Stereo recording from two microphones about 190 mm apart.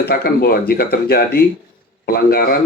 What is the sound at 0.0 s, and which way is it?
Speech, 55° left (ahead or behind).